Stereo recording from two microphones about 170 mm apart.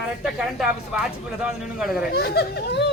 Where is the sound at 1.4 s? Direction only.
5° right (ahead or behind).